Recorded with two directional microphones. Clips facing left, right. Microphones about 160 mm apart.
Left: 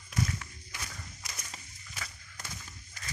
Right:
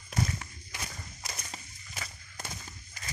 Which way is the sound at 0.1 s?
25° right (ahead or behind).